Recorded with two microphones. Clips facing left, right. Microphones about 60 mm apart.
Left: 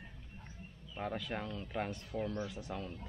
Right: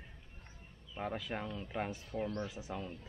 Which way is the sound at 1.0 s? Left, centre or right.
Centre.